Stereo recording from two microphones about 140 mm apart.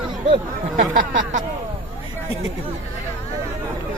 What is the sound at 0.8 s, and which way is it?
Speech, 70° right (ahead or behind).